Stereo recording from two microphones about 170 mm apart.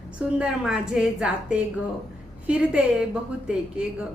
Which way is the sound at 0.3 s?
5° right (ahead or behind).